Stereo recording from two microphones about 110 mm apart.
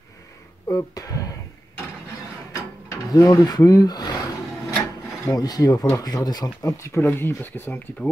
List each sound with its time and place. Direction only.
0.7 s speech: 30° left (ahead or behind)
2.5 s pulleys: 30° left (ahead or behind)
5.3 s speech: 35° left (ahead or behind); by 8.1 s 20° left (ahead or behind)